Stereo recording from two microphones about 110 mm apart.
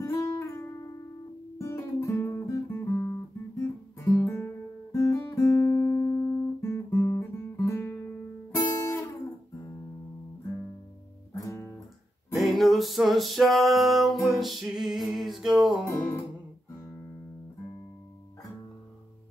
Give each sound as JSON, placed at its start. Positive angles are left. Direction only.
{"t": 0.0, "sound": "music", "side_deg": 30}
{"t": 1.6, "sound": "guitar", "side_deg": 25}
{"t": 4.9, "sound": "music", "side_deg": 30}
{"t": 8.5, "sound": "guitar", "side_deg": 25}
{"t": 11.3, "sound": "guitar", "side_deg": 30}
{"t": 12.4, "sound": "music", "side_deg": 0}